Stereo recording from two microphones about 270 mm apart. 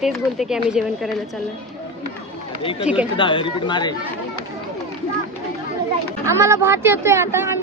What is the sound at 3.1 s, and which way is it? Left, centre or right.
Speech, centre.